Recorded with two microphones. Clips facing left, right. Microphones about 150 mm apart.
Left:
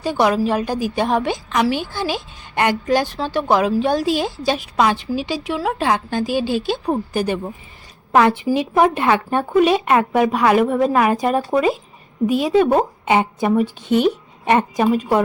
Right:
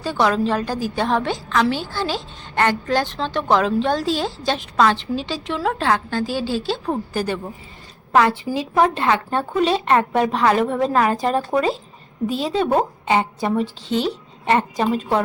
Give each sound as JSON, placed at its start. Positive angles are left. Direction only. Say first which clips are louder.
{"t": 0.0, "sound": "a woman's voice", "louder": "left 2 dB", "side_deg": 15}